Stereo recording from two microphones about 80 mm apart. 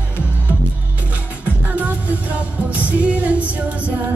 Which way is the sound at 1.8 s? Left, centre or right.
Centre.